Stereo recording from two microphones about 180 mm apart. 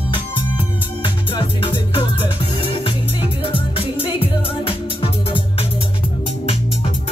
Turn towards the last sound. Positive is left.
turn(degrees=30)  # may be behind; listen again after turning